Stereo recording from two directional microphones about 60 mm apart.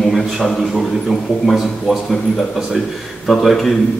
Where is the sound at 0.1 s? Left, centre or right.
Centre.